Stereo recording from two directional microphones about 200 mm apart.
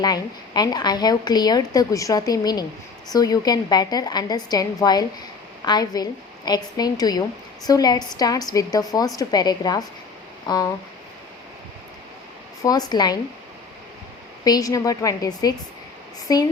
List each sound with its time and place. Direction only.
0.0 s a woman's voice: 20° left (ahead or behind)
12.6 s a woman's voice: 20° left (ahead or behind)
14.4 s a woman's voice: 20° left (ahead or behind)